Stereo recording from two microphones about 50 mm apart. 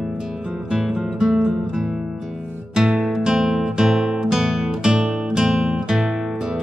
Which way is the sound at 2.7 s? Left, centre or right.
Centre.